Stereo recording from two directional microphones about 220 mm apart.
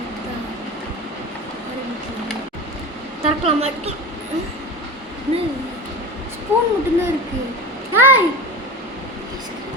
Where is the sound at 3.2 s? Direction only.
30° right (ahead or behind).